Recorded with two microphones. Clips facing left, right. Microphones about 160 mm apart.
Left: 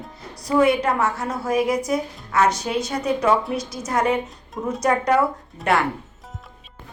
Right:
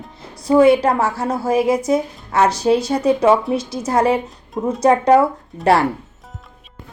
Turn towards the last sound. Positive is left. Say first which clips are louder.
# right 6 dB
turn(degrees=-35)  # may be behind; listen again after turning